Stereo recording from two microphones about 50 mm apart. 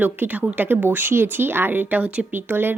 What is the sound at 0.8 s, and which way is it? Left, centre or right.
A woman's voice, right.